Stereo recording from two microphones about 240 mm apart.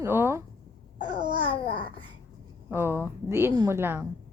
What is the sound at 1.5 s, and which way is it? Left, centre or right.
Babbling, left.